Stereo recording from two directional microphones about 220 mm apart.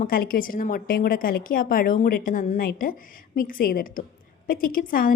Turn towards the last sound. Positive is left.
turn(degrees=40)  # may be behind; listen again after turning